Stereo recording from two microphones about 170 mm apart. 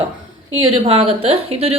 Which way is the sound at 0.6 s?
35° right (ahead or behind).